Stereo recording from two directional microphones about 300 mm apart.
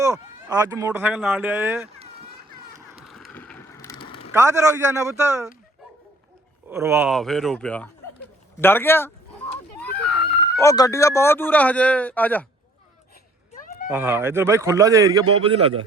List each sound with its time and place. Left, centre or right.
0.0 s speech: centre
2.0 s children playing: centre
2.9 s bicycle: centre
4.4 s speech: centre
6.7 s speech: centre
9.7 s screaming: centre
10.6 s speech: centre
13.9 s speech: centre